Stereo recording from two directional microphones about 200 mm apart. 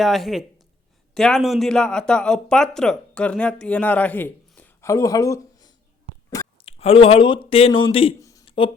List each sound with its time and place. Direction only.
0.0 s speech: centre (ahead or behind); by 5.7 s 15° left (ahead or behind)
6.3 s speech: 30° left (ahead or behind)
8.2 s a sound: 15° left (ahead or behind)